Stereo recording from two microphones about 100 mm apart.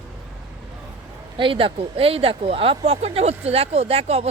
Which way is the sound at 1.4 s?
60° right (ahead or behind).